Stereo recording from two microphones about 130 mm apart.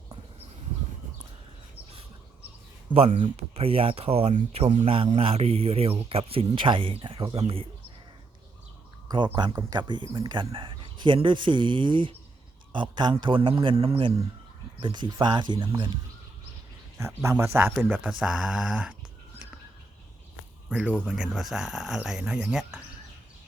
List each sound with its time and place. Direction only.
3.3 s a man's voice: 50° right (ahead or behind)
4.4 s a man's voice: 60° right (ahead or behind); by 7.7 s 45° right (ahead or behind)
9.0 s speech: 35° right (ahead or behind)
9.5 s speech: 25° right (ahead or behind)
17.2 s speech: 20° right (ahead or behind)
20.7 s speech: 10° right (ahead or behind)